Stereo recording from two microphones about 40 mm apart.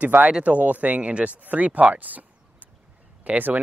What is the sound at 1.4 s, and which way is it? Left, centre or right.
Speech, right.